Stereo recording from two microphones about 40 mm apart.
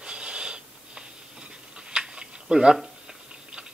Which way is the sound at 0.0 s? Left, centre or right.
Right.